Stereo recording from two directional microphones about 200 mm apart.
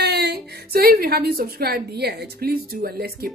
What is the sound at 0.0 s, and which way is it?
Speech, 55° right (ahead or behind).